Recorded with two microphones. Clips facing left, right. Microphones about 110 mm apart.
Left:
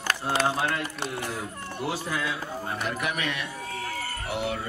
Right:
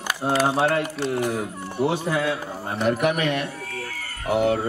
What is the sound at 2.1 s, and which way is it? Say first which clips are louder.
Speech: right 6 dB; 60° right (ahead or behind).